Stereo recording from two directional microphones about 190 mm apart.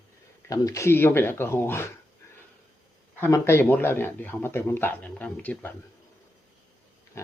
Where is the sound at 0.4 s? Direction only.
15° left (ahead or behind).